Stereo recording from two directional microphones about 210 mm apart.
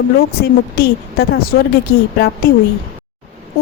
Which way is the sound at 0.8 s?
50° left (ahead or behind).